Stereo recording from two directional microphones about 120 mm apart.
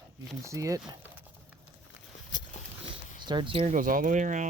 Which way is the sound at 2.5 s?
90° left.